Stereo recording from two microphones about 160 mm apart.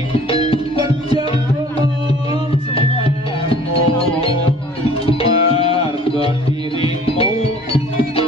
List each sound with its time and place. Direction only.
2.7 s music: 35° left (ahead or behind)